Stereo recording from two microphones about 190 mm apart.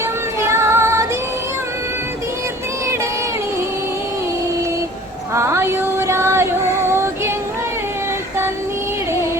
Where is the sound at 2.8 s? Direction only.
15° right (ahead or behind).